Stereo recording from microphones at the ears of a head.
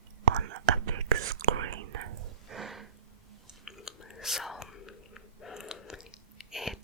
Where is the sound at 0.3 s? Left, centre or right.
Right.